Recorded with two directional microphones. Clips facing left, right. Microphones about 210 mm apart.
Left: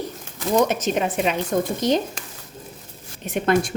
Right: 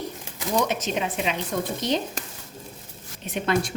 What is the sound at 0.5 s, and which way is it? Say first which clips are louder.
Speech: left 5 dB; 45° left (ahead or behind).